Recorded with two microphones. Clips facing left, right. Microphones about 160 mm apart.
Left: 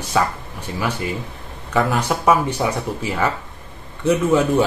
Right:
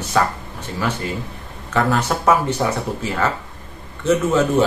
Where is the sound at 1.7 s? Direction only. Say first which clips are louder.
Even; 10° left (ahead or behind).